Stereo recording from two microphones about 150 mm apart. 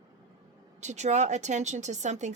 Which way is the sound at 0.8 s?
50° right (ahead or behind).